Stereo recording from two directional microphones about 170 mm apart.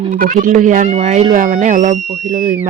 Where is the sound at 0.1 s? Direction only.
50° right (ahead or behind).